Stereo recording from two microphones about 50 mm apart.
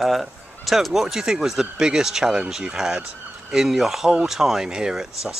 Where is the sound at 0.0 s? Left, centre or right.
Centre.